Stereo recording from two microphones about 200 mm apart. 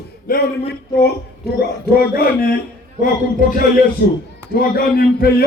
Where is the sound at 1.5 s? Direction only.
50° left (ahead or behind).